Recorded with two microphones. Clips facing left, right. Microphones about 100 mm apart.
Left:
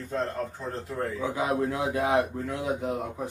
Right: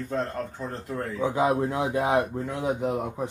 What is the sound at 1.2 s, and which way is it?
Speech, 25° right (ahead or behind).